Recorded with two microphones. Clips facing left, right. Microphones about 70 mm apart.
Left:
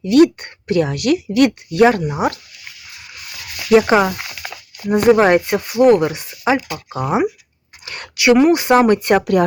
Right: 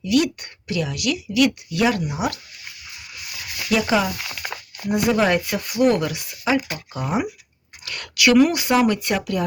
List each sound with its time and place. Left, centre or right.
0.0 s speech: left
3.7 s speech: left
8.7 s speech: left